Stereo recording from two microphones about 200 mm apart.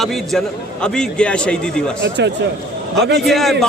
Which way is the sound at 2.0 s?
60° right (ahead or behind).